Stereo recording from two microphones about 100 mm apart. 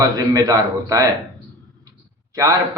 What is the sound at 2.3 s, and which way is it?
Speech, 35° right (ahead or behind).